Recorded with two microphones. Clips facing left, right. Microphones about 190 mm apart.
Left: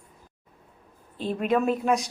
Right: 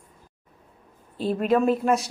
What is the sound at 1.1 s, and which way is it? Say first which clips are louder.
Speech: right 4 dB; 40° right (ahead or behind).